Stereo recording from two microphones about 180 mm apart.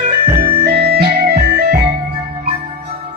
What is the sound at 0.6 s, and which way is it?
Music, 60° right (ahead or behind).